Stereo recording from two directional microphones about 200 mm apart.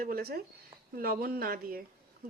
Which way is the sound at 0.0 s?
50° right (ahead or behind).